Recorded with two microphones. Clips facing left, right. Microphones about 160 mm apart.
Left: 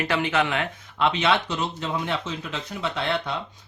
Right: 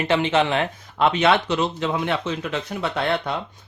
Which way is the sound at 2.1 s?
65° right (ahead or behind).